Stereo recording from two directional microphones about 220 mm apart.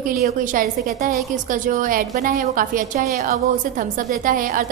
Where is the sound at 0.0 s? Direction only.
40° right (ahead or behind).